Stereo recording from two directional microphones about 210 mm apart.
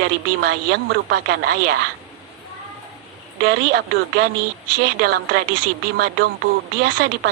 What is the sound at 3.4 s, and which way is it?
Speech, 50° right (ahead or behind).